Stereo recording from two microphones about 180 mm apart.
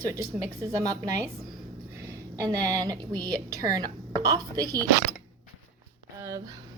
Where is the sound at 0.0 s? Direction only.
15° right (ahead or behind).